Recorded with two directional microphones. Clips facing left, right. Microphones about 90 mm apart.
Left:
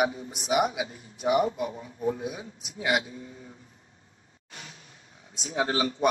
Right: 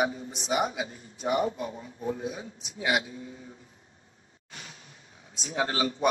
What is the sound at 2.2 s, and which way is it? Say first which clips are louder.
Speech: even; 5° left (ahead or behind).